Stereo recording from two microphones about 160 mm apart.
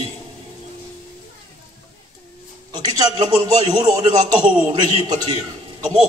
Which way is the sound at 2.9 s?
30° right (ahead or behind).